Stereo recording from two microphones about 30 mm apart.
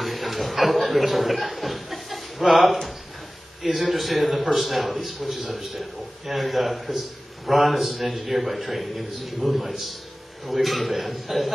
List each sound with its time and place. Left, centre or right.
0.0 s a man's voice: centre